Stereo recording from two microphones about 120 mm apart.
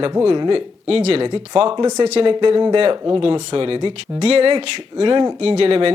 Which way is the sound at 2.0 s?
65° right (ahead or behind).